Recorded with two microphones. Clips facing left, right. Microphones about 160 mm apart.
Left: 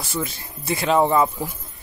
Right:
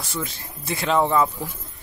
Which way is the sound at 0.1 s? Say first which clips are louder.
Left 4 dB; 5° left (ahead or behind).